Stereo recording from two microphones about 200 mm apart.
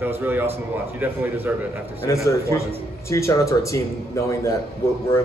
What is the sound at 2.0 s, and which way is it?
Speech, 15° left (ahead or behind).